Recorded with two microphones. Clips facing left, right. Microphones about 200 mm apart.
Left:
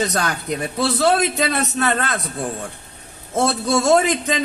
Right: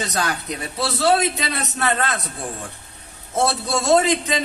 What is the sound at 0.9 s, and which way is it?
Speech, 55° left (ahead or behind).